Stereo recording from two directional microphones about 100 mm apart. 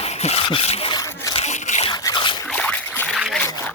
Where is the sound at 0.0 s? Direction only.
90° left.